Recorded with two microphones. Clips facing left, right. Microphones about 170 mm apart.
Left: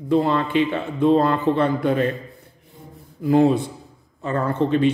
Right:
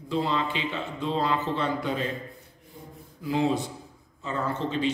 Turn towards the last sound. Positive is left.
turn(degrees=55)  # may be behind; listen again after turning